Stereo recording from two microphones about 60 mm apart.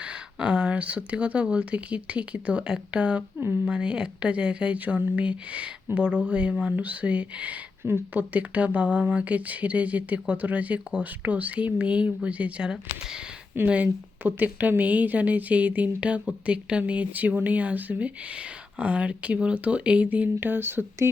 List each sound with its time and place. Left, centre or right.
0.0 s speech: centre
7.8 s speech: right
8.3 s speech: right
12.7 s speech: centre
13.7 s speech: right